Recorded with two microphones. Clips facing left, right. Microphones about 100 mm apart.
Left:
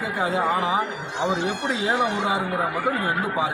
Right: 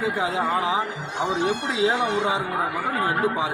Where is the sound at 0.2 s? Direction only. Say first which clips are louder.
Left 5 dB; centre (ahead or behind).